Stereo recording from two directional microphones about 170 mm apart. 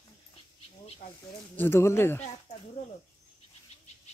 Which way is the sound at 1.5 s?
15° left (ahead or behind).